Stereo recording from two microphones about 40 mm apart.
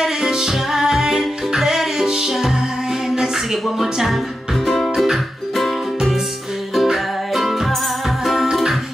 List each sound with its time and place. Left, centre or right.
0.0 s music: centre
3.7 s speech: centre
4.6 s music: centre
4.9 s music: centre
6.7 s music: centre